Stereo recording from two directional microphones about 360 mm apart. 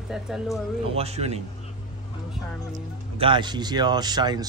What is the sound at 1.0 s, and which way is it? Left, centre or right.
Speech, centre.